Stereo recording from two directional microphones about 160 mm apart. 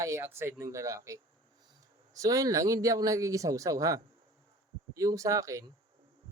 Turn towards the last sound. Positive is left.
turn(degrees=-20)  # may be behind; listen again after turning